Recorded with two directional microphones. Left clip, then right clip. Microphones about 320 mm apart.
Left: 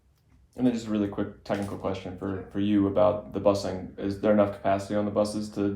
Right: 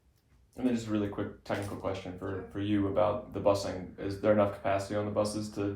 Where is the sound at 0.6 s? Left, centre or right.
Left.